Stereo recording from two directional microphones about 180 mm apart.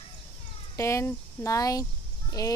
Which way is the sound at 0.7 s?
15° left (ahead or behind).